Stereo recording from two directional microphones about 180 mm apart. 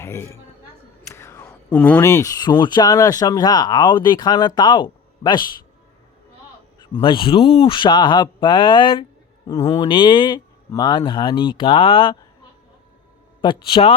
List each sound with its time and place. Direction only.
0.0 s a woman's voice: 15° left (ahead or behind)
1.1 s whispering: 15° left (ahead or behind)
1.7 s speech: 10° left (ahead or behind); by 5.4 s 25° left (ahead or behind)
7.0 s speech: 30° left (ahead or behind)
13.4 s speech: 25° left (ahead or behind)